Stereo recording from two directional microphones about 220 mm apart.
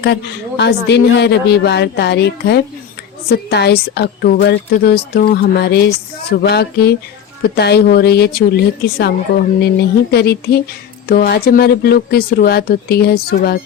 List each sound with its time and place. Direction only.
0.0 s a woman's voice: 50° left (ahead or behind)